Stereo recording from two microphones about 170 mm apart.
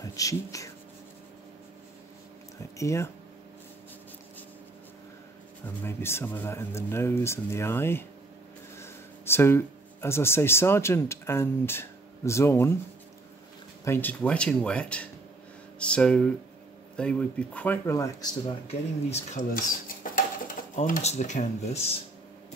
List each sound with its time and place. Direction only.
0.0 s speech: 20° left (ahead or behind)
2.8 s speech: 15° left (ahead or behind)
5.9 s speech: 15° left (ahead or behind)
13.8 s speech: 10° left (ahead or behind)
18.7 s speech: 40° left (ahead or behind)
19.5 s speech: 55° left (ahead or behind)